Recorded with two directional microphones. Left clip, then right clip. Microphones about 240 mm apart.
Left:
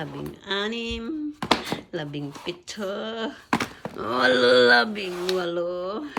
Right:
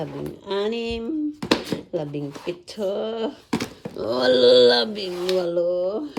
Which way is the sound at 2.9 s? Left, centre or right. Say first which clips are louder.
Right 3 dB; left.